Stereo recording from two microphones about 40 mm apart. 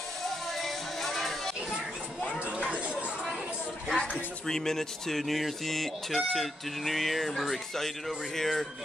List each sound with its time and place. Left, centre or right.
0.3 s music: centre
2.4 s chatter: right
3.9 s speech: centre